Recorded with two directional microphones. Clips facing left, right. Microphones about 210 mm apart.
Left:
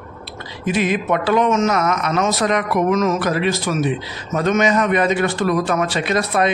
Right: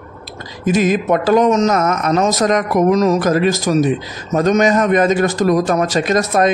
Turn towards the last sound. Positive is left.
turn(degrees=-45)  # may be behind; listen again after turning